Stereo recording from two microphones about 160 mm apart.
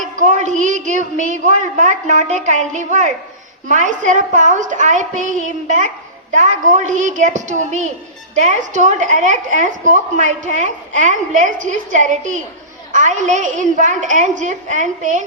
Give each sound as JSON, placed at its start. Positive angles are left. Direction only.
{"t": 0.0, "sound": "a woman's voice", "side_deg": -50}